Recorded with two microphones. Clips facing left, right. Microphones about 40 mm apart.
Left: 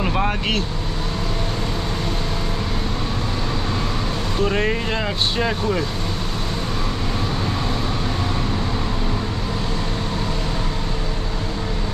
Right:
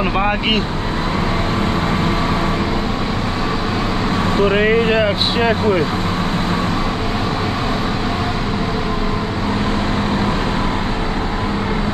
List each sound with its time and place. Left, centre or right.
0.0 s speech: right
4.4 s speech: right